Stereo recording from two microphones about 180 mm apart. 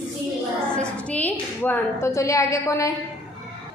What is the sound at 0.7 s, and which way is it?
A woman's voice, 5° left (ahead or behind).